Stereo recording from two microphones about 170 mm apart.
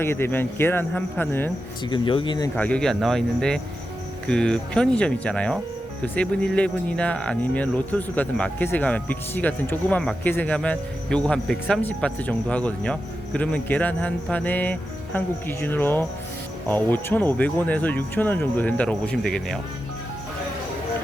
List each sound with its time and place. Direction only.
0.0 s speech: 15° left (ahead or behind)
1.8 s speech: 30° left (ahead or behind)
2.6 s speech: 5° left (ahead or behind)